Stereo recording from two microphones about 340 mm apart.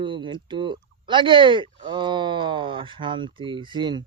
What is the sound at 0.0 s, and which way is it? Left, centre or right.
Speech, centre.